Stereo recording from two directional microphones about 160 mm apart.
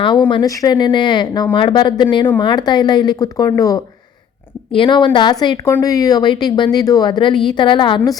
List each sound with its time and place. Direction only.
0.3 s a woman's voice: 25° left (ahead or behind)